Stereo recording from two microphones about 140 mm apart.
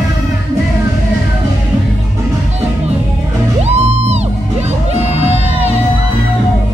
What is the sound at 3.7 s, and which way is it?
Music, 50° right (ahead or behind).